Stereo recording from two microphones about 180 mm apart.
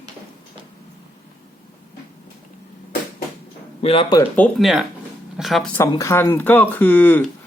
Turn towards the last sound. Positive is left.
turn(degrees=10)  # may be behind; listen again after turning